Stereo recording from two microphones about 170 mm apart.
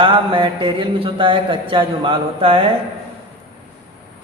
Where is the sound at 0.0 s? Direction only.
30° right (ahead or behind).